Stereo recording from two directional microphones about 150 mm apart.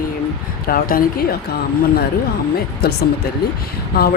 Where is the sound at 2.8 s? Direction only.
90° left.